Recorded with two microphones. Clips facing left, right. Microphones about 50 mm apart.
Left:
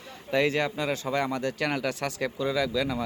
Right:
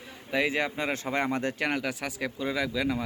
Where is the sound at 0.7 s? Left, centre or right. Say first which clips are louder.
Left 1 dB; right.